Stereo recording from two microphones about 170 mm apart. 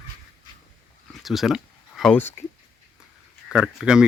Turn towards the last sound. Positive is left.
turn(degrees=-5)  # may be behind; listen again after turning